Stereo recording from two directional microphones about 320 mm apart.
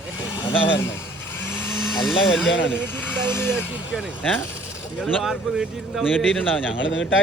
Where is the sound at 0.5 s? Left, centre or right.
Left.